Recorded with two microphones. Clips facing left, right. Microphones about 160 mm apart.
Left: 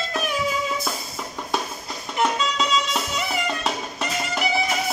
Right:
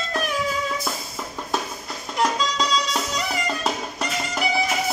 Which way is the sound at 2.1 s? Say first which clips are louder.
Even; 5° left (ahead or behind).